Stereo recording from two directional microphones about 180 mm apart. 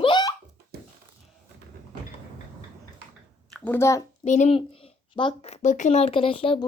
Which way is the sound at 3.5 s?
10° left (ahead or behind).